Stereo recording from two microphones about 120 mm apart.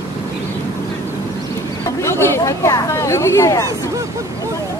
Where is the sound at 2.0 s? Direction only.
20° left (ahead or behind).